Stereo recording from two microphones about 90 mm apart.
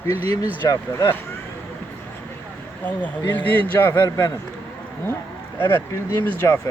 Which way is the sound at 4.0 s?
50° left (ahead or behind).